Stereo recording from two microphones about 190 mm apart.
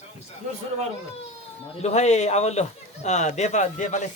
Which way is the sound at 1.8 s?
35° left (ahead or behind).